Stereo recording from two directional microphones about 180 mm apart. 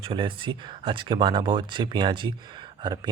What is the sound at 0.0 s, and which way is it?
Speech, 30° right (ahead or behind).